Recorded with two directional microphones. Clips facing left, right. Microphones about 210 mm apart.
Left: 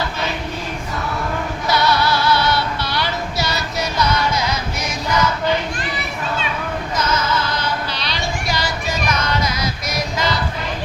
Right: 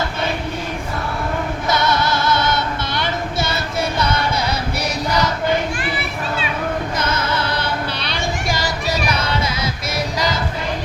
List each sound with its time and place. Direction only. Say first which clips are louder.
2.0 s music: left 1 dB; 50° right (ahead or behind)
2.9 s child singing: right 2 dB; 20° right (ahead or behind)
3.9 s music: left 4 dB; 30° right (ahead or behind)
6.9 s music: left 1 dB; 55° right (ahead or behind); by 10.2 s 30° right (ahead or behind)